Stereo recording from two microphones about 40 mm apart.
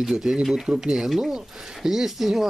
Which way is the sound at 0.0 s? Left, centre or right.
Centre.